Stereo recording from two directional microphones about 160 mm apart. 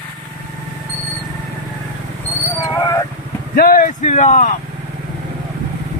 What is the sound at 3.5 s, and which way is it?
Speech, 65° left (ahead or behind).